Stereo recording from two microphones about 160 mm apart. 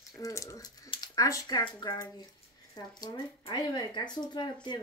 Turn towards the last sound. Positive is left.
turn(degrees=30)  # may be behind; listen again after turning